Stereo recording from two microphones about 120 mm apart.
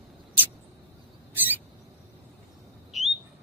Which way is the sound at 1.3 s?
15° right (ahead or behind).